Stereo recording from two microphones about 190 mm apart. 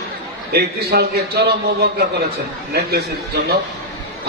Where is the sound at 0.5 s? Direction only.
55° right (ahead or behind).